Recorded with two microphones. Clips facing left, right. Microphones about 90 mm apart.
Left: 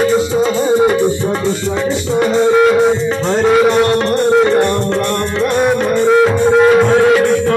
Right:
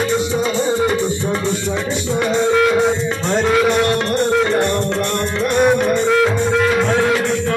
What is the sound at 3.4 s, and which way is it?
Music, 15° left (ahead or behind).